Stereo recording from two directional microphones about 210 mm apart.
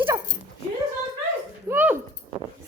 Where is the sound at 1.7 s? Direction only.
10° right (ahead or behind).